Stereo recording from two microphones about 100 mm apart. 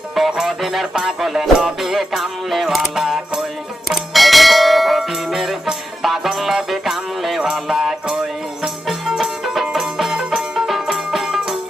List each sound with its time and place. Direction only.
0.1 s music: 5° right (ahead or behind)
3.8 s bell: centre (ahead or behind)